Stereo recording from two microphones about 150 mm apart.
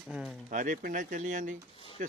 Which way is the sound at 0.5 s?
60° right (ahead or behind).